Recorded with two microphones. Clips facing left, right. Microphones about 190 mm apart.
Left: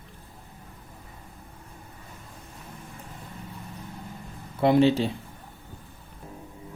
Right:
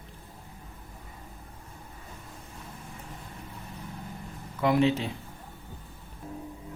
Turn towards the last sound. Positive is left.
turn(degrees=30)  # may be behind; listen again after turning